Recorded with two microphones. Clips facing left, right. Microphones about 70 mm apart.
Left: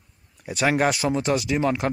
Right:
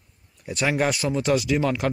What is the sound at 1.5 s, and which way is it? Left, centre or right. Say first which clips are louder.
Speech: even; left.